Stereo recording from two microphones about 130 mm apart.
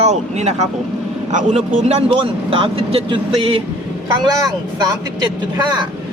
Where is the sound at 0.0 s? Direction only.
60° right (ahead or behind).